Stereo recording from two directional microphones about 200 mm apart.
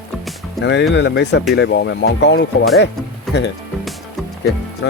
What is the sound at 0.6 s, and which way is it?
Speech, 60° left (ahead or behind).